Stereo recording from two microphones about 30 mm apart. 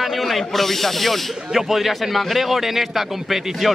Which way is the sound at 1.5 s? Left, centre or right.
Centre.